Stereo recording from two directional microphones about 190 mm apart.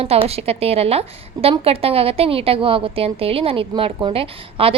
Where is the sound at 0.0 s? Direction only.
30° right (ahead or behind).